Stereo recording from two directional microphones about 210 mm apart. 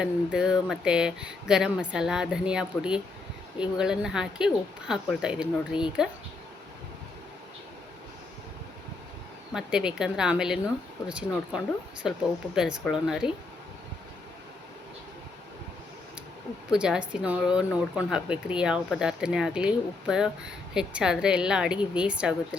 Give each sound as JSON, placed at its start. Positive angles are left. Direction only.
{"t": 0.0, "sound": "speech", "side_deg": -5}
{"t": 5.7, "sound": "speech", "side_deg": 25}
{"t": 9.5, "sound": "speech", "side_deg": -5}
{"t": 16.6, "sound": "speech", "side_deg": -5}